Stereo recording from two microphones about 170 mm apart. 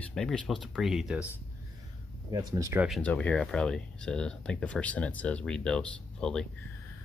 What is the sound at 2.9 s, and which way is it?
Speech, 10° left (ahead or behind).